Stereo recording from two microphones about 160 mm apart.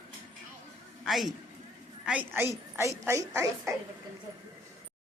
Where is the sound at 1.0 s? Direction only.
Centre (ahead or behind); by 3.8 s 20° right (ahead or behind).